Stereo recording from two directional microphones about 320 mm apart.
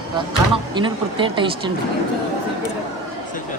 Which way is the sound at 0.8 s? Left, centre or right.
Centre.